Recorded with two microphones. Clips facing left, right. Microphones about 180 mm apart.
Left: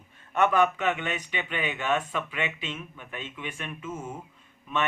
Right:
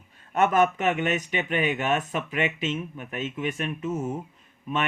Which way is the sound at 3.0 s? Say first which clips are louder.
Right 8 dB; 40° right (ahead or behind).